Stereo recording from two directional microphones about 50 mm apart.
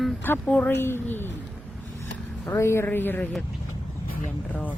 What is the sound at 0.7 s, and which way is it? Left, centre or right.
Speech, left.